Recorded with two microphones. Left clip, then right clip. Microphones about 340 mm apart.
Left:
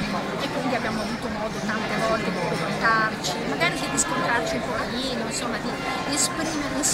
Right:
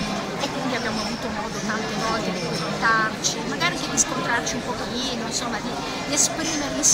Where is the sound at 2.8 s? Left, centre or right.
Centre.